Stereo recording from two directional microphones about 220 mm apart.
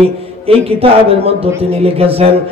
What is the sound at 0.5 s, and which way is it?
Speech, 25° right (ahead or behind).